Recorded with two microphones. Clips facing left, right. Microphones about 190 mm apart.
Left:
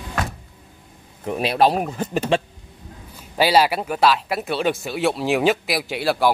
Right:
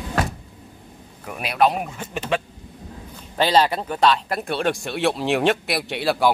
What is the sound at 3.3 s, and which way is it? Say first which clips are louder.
Speech: left 1 dB; 10° left (ahead or behind).